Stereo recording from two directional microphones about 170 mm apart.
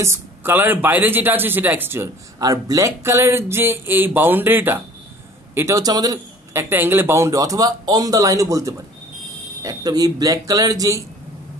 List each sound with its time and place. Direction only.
0.0 s a man's voice: 15° right (ahead or behind)